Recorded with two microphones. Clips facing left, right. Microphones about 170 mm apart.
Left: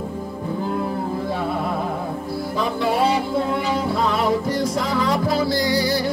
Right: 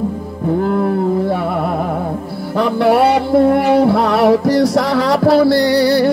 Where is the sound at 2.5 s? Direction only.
70° right (ahead or behind).